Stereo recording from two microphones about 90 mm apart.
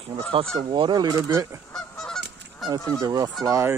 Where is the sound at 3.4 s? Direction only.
35° right (ahead or behind).